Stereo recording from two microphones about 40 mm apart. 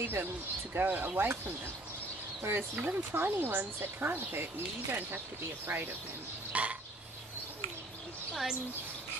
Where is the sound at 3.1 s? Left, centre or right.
Right.